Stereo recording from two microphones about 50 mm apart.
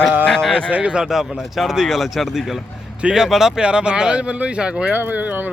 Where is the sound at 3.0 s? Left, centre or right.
Centre.